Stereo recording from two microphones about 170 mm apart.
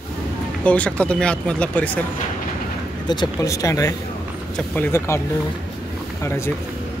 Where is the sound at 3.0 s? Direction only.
25° left (ahead or behind).